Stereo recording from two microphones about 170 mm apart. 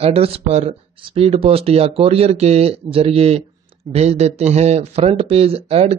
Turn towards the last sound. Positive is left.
turn(degrees=-35)  # may be behind; listen again after turning